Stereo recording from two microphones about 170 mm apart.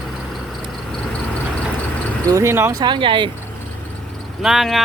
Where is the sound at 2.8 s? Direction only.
30° right (ahead or behind).